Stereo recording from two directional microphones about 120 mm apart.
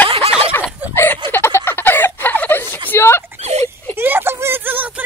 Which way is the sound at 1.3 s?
20° left (ahead or behind).